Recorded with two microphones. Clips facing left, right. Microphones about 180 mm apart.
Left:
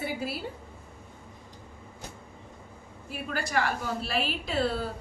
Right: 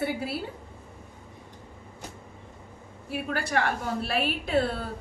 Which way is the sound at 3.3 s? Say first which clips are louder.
Right 1 dB; 55° right (ahead or behind).